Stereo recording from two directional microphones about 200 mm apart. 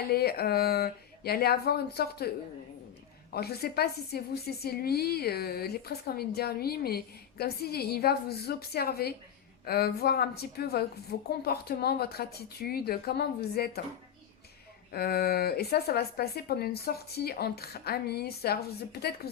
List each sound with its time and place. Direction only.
0.1 s speech: 50° left (ahead or behind)
3.3 s speech: 50° left (ahead or behind)
14.9 s speech: 50° left (ahead or behind)